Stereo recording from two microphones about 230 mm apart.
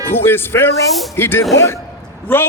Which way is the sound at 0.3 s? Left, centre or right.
Centre.